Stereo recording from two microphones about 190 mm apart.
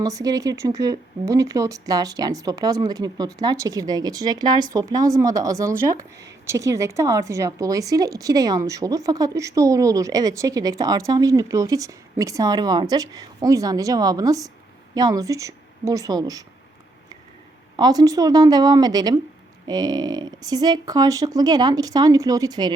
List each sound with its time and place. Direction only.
0.0 s a woman's voice: 20° right (ahead or behind)
17.7 s speech: 20° right (ahead or behind)